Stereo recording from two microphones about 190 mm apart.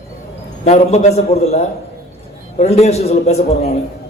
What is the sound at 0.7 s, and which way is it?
A man's voice, 35° left (ahead or behind).